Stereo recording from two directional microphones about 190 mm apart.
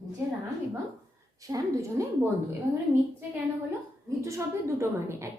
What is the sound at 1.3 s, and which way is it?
Speech, 20° right (ahead or behind).